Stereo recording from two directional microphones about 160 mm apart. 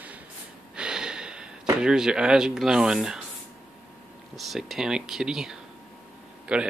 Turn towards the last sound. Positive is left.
turn(degrees=-5)  # may be behind; listen again after turning